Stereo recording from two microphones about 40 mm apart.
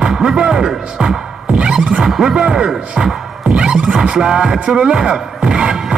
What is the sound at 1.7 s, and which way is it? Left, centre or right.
Music, centre.